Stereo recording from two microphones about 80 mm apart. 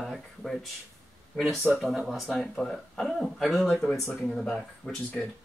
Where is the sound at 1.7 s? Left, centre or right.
Centre.